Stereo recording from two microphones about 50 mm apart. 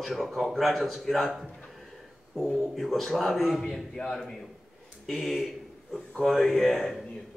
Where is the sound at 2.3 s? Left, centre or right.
Centre.